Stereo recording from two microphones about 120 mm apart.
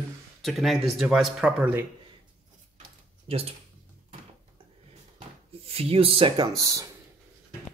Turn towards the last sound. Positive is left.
turn(degrees=-30)  # may be behind; listen again after turning